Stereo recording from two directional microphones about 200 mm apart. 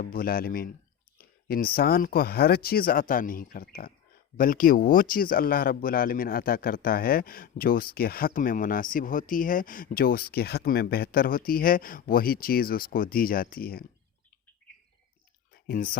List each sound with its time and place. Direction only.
0.0 s speech: 45° left (ahead or behind)
15.7 s speech: 45° left (ahead or behind)